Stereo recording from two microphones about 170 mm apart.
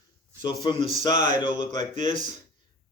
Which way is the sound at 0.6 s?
30° left (ahead or behind).